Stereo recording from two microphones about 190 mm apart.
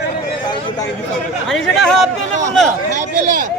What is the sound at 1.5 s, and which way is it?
Speech, centre (ahead or behind).